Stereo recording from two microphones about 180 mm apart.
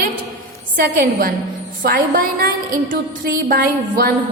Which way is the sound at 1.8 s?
50° right (ahead or behind).